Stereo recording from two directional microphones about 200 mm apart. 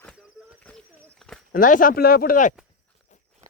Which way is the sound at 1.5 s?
45° left (ahead or behind).